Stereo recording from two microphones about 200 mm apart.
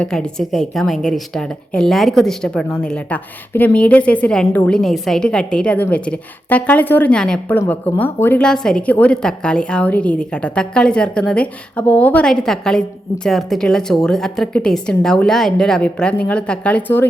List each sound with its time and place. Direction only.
0.0 s a woman's voice: 5° left (ahead or behind)